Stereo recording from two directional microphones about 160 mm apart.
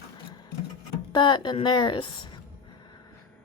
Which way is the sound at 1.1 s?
30° left (ahead or behind).